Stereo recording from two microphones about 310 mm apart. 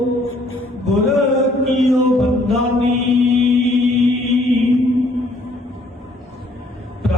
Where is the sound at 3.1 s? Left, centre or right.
Centre.